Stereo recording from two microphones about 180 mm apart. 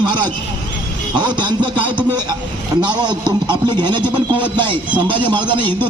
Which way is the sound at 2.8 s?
25° right (ahead or behind).